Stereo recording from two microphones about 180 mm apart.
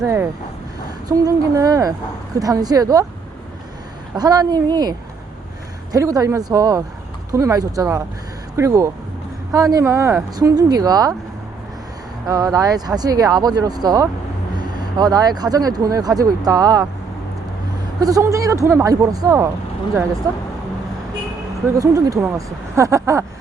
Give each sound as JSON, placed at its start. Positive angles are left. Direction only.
{"t": 0.0, "sound": "speech", "side_deg": -15}
{"t": 4.1, "sound": "speech", "side_deg": -20}
{"t": 12.3, "sound": "speech", "side_deg": -20}
{"t": 18.0, "sound": "speech", "side_deg": -20}
{"t": 21.8, "sound": "speech", "side_deg": -20}